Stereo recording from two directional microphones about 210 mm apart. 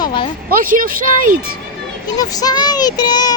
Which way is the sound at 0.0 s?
20° left (ahead or behind).